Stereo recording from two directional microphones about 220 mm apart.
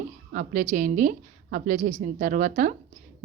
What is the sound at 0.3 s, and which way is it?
Speech, 35° right (ahead or behind).